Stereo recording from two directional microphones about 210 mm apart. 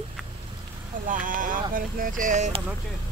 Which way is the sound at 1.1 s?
40° right (ahead or behind).